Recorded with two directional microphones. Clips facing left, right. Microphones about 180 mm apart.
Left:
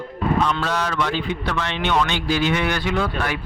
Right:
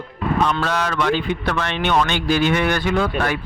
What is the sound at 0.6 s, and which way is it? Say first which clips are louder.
A man's voice: right 2 dB; 60° right (ahead or behind).